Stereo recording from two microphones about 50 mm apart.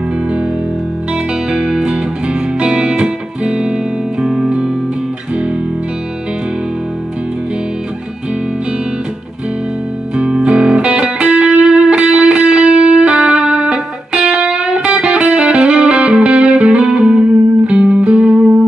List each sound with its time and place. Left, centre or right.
1.1 s music: centre
10.1 s music: right